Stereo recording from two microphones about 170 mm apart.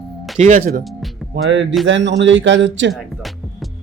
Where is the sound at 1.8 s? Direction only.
90° right.